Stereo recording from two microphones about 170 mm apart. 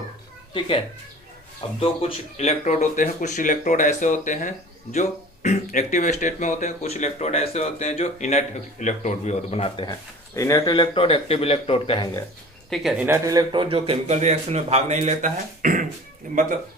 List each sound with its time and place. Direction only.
1.8 s speech: 35° left (ahead or behind)
10.3 s a man's voice: 15° left (ahead or behind); by 12.0 s 30° left (ahead or behind)
12.7 s speech: centre (ahead or behind)
13.1 s a man's voice: 15° right (ahead or behind); by 16.6 s 50° right (ahead or behind)